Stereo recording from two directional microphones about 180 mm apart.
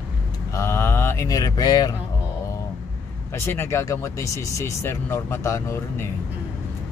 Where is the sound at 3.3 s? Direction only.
15° left (ahead or behind).